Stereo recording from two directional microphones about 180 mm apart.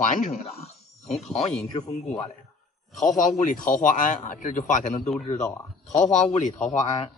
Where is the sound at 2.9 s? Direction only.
45° left (ahead or behind).